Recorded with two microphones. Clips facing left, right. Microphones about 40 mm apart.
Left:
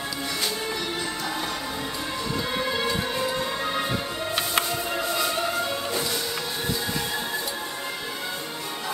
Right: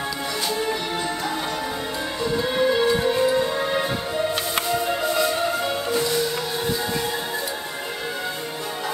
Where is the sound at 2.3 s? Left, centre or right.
Centre.